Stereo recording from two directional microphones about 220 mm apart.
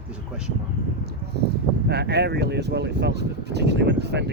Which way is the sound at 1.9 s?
50° right (ahead or behind).